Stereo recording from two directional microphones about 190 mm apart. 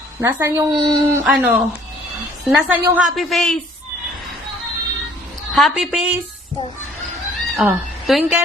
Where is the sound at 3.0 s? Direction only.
Centre (ahead or behind).